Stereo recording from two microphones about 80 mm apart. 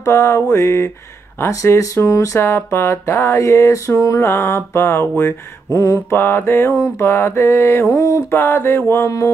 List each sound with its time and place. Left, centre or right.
0.0 s speech: left
5.7 s mantra: left
6.1 s mantra: left
7.0 s speech: left
8.3 s mantra: left